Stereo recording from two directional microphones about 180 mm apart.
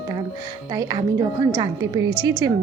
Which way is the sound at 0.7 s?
20° right (ahead or behind).